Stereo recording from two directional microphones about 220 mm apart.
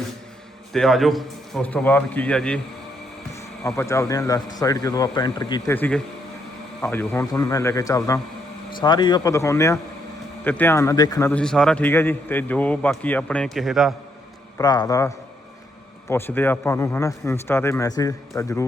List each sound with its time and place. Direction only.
0.7 s a man's voice: centre (ahead or behind)
3.7 s speech: 10° left (ahead or behind)
11.3 s a man's voice: 5° left (ahead or behind)
14.6 s speech: 20° left (ahead or behind)